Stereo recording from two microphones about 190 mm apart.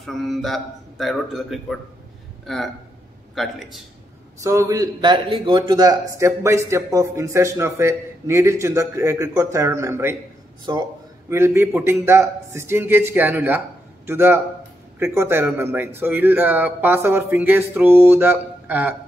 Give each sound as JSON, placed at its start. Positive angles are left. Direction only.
{"t": 0.0, "sound": "a man's voice", "side_deg": 0}
{"t": 4.4, "sound": "a man's voice", "side_deg": -15}